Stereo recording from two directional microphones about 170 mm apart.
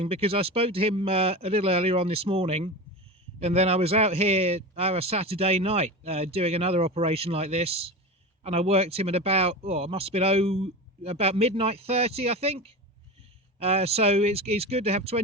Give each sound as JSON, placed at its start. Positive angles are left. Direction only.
{"t": 0.0, "sound": "a man's voice", "side_deg": -35}